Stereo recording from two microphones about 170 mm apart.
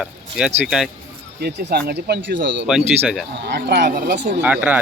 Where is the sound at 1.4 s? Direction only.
70° right (ahead or behind); by 2.6 s 90° right.